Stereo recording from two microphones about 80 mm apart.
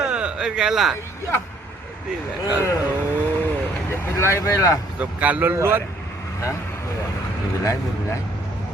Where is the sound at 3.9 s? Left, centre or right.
Left.